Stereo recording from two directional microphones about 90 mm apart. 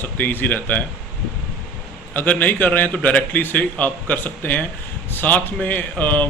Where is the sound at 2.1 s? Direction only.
20° left (ahead or behind).